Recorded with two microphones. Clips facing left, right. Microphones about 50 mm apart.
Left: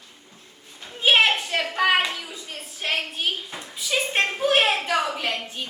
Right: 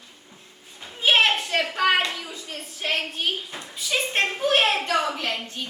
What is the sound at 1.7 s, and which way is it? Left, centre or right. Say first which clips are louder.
Hands: left 2 dB; centre.